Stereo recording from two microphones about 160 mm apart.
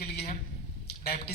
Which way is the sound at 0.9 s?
90° left.